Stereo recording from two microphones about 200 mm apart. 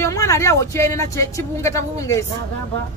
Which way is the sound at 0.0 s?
15° left (ahead or behind).